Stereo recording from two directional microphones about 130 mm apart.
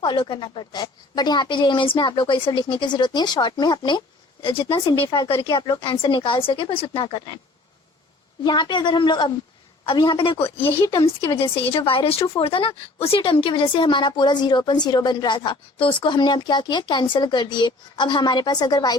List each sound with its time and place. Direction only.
0.0 s a woman's voice: 40° left (ahead or behind)
8.4 s a woman's voice: 35° left (ahead or behind)
11.5 s a woman's voice: 45° left (ahead or behind)